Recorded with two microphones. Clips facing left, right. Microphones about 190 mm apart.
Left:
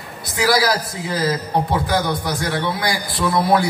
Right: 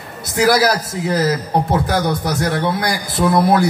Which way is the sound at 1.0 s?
45° right (ahead or behind).